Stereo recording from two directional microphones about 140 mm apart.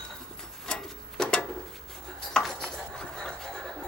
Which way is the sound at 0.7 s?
5° left (ahead or behind).